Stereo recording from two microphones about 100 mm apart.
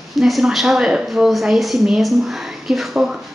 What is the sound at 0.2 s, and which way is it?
A woman's voice, 5° right (ahead or behind).